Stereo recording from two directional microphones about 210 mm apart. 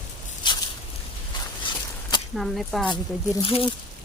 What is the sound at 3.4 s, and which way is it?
Speech, 25° left (ahead or behind).